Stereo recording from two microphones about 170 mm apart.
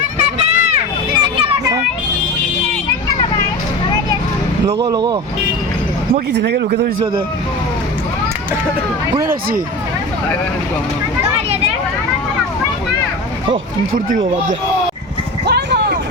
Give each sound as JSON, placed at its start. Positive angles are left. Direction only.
{"t": 0.2, "sound": "a sound", "side_deg": -40}
{"t": 1.4, "sound": "children playing", "side_deg": -25}
{"t": 4.6, "sound": "speech", "side_deg": -25}
{"t": 6.3, "sound": "speech", "side_deg": -75}
{"t": 9.2, "sound": "speech", "side_deg": -60}
{"t": 15.4, "sound": "vehicle", "side_deg": -75}